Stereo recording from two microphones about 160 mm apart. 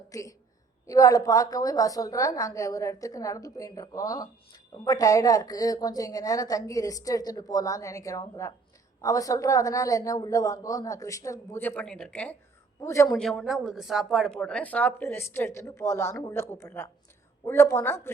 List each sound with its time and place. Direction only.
0.1 s a woman's voice: 20° left (ahead or behind)
12.8 s a woman's voice: 20° left (ahead or behind)
13.1 s speech: 5° left (ahead or behind)